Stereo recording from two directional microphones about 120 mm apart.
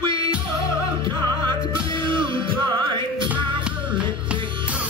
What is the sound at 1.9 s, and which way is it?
Music, 40° right (ahead or behind).